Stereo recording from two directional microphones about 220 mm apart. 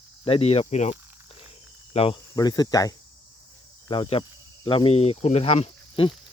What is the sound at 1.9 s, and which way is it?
Cricket, 25° left (ahead or behind).